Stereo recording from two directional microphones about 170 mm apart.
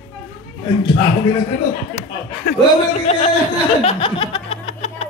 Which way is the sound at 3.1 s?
40° left (ahead or behind).